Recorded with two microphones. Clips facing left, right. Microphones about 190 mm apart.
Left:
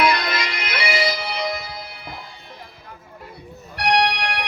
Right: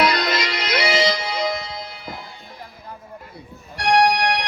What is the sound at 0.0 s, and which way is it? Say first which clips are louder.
Music: right 1 dB; 55° left (ahead or behind).